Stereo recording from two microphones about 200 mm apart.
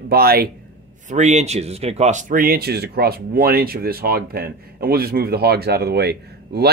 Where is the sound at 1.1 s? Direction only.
35° right (ahead or behind).